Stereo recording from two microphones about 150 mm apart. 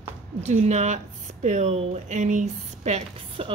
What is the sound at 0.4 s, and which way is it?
Speech, 45° right (ahead or behind).